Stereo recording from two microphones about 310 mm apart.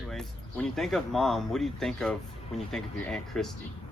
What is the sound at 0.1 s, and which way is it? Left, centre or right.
Speech, centre.